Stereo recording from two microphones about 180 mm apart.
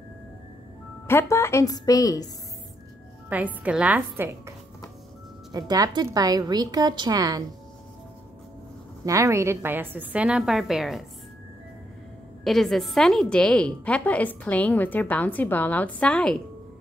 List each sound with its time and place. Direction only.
1.0 s a woman's voice: 15° left (ahead or behind)
3.3 s a woman's voice: 10° right (ahead or behind)
5.5 s a woman's voice: 20° right (ahead or behind)
9.0 s a woman's voice: 15° right (ahead or behind); by 11.1 s centre (ahead or behind)
12.4 s a woman's voice: centre (ahead or behind)